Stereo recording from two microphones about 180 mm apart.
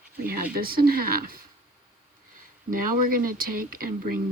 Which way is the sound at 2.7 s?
50° right (ahead or behind).